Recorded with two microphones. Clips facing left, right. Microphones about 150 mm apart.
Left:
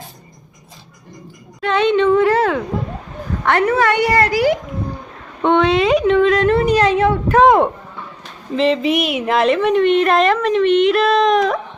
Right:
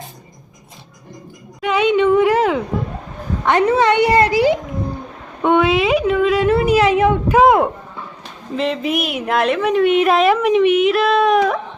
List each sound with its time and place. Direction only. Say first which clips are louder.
1.6 s a woman's voice: even; 10° right (ahead or behind)
5.4 s a woman's voice: left 1 dB; 10° right (ahead or behind)